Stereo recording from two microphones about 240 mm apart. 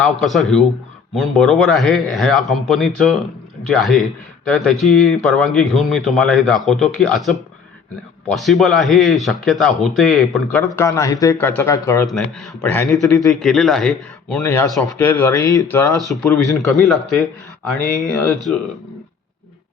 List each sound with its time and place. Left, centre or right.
0.0 s a man's voice: centre